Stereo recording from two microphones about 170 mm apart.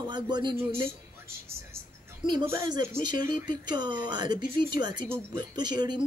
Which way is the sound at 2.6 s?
25° right (ahead or behind).